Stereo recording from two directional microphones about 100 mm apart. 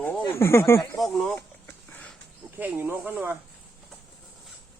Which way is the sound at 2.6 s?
20° right (ahead or behind).